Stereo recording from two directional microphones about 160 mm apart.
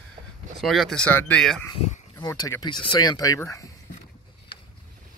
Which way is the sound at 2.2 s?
25° left (ahead or behind).